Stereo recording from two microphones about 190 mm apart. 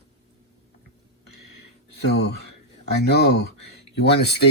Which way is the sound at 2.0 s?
60° left (ahead or behind).